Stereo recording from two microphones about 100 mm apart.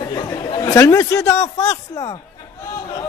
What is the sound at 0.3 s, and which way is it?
A man's voice, 30° left (ahead or behind).